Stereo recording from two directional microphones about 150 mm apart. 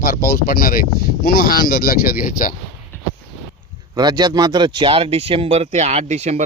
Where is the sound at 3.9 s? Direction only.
25° right (ahead or behind); by 6.4 s 50° right (ahead or behind).